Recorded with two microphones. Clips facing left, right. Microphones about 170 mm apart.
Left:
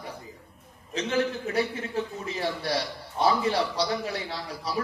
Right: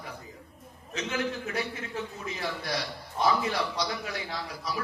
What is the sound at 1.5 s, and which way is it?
A man's voice, 30° left (ahead or behind).